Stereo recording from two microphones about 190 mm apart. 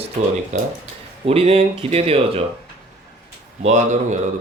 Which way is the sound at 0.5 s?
35° right (ahead or behind).